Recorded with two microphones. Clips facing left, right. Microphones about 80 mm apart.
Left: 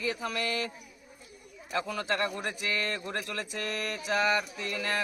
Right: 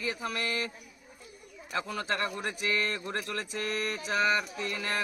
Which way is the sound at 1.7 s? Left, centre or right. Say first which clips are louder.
Left 2 dB; right.